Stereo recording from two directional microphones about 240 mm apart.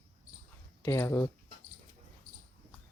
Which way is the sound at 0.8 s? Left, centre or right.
Centre.